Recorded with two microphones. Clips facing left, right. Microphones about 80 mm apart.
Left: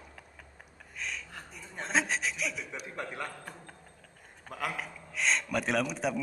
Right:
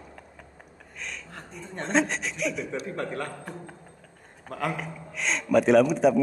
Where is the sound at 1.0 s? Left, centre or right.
Centre.